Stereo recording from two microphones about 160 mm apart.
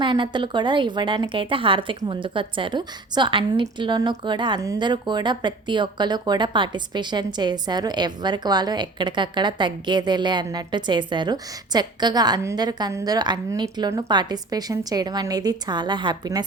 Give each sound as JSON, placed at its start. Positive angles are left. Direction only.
{"t": 0.0, "sound": "a woman's voice", "side_deg": -30}